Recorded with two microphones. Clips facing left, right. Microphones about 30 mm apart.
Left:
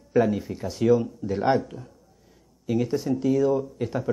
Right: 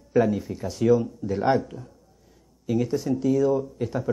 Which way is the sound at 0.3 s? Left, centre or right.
Centre.